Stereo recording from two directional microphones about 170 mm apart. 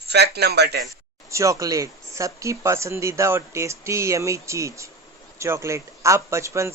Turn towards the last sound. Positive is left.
turn(degrees=-15)  # may be behind; listen again after turning